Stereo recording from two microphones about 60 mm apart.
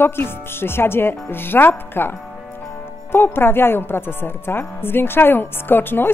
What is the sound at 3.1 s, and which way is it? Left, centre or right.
A woman's voice, left.